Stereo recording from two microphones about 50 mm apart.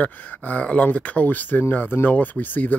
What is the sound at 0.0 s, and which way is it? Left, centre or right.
Speech, left.